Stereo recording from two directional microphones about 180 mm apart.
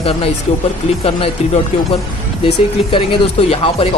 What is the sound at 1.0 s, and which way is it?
Speech, 30° left (ahead or behind).